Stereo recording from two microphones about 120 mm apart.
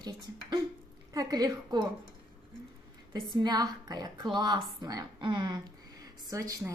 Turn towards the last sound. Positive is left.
turn(degrees=-25)  # may be behind; listen again after turning